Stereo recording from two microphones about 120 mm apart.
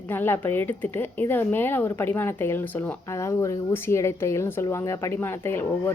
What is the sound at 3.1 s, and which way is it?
Speech, 25° left (ahead or behind).